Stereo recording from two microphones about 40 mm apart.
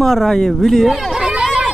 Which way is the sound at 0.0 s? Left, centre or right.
Centre.